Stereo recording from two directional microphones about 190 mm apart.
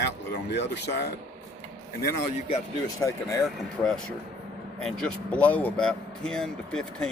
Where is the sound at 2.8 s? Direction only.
15° left (ahead or behind).